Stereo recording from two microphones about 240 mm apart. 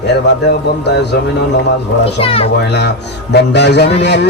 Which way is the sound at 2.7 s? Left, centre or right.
Left.